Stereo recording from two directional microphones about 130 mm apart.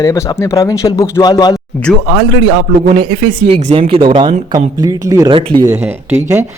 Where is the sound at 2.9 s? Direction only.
45° right (ahead or behind); by 5.3 s 25° right (ahead or behind).